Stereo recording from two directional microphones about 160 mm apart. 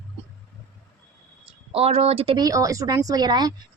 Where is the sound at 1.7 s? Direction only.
40° right (ahead or behind).